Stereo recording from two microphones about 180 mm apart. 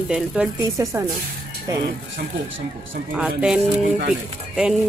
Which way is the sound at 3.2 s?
5° right (ahead or behind).